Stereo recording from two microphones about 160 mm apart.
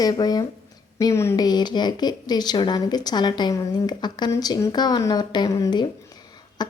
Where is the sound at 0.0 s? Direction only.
25° left (ahead or behind).